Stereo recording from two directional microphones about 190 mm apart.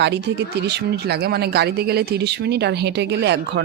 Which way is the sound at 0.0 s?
65° right (ahead or behind).